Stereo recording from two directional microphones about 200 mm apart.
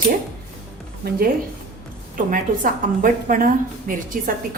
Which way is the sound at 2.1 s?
45° right (ahead or behind).